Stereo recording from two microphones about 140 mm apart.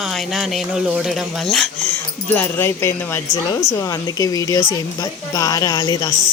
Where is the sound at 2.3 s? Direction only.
15° left (ahead or behind).